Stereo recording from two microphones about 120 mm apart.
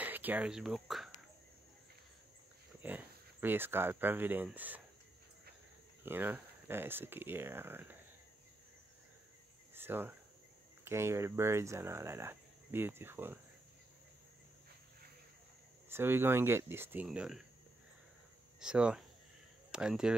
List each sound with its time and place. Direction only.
0.0 s speech: 15° right (ahead or behind)
2.8 s speech: 15° right (ahead or behind)
6.0 s speech: 15° right (ahead or behind)
9.8 s cricket: 20° right (ahead or behind)
10.8 s speech: 20° right (ahead or behind)
15.9 s speech: 20° right (ahead or behind)
18.6 s speech: 5° right (ahead or behind)